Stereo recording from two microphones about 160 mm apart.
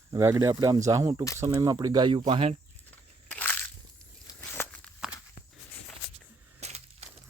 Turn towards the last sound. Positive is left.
turn(degrees=-45)  # may be behind; listen again after turning